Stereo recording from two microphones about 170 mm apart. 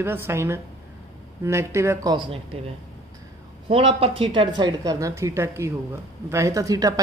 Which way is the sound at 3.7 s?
30° right (ahead or behind).